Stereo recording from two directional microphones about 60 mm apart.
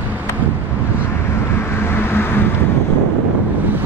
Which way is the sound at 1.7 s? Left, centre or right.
Left.